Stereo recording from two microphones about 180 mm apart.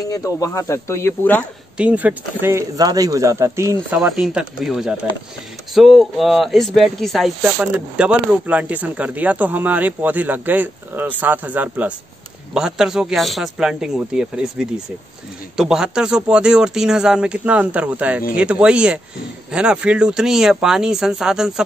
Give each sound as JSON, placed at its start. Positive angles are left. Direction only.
{"t": 0.1, "sound": "speech", "side_deg": 20}
{"t": 1.8, "sound": "speech", "side_deg": -5}
{"t": 4.0, "sound": "speech", "side_deg": -5}